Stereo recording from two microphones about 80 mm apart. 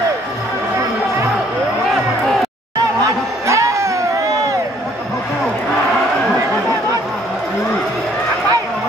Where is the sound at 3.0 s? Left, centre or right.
Right.